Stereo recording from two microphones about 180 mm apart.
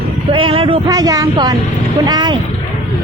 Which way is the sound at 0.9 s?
20° right (ahead or behind).